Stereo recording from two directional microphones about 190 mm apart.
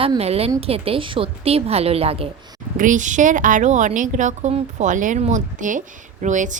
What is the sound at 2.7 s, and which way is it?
A woman's voice, 45° right (ahead or behind).